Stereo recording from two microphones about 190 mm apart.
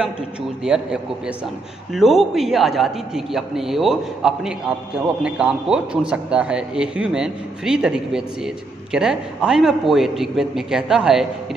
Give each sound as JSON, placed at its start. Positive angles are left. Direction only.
{"t": 0.7, "sound": "a man's voice", "side_deg": -5}